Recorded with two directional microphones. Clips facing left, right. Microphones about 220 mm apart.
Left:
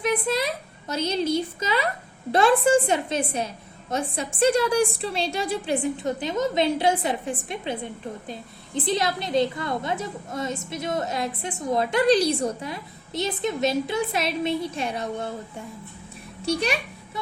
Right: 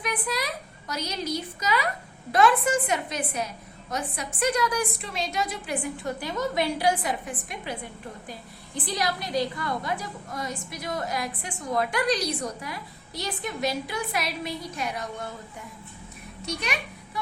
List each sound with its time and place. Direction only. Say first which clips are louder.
0.0 s a woman's voice: left 6 dB; 25° left (ahead or behind)
16.5 s a child's voice: left 8 dB; 30° left (ahead or behind)